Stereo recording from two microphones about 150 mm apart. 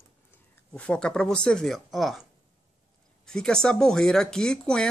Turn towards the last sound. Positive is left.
turn(degrees=5)  # may be behind; listen again after turning